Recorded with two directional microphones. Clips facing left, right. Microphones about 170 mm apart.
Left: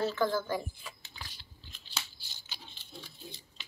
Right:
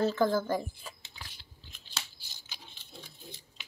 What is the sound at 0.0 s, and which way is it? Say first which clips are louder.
Speech: right 3 dB; 40° right (ahead or behind).